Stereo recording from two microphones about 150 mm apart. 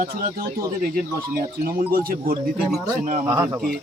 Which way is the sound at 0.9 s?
75° right (ahead or behind).